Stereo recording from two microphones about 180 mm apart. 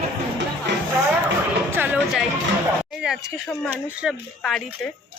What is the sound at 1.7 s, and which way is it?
Music, 10° right (ahead or behind).